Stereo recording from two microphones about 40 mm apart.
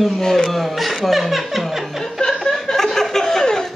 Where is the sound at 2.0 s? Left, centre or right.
Centre.